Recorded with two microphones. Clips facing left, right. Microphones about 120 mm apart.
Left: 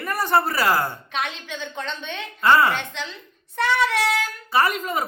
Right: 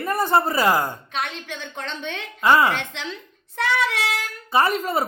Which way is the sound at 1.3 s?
65° right (ahead or behind).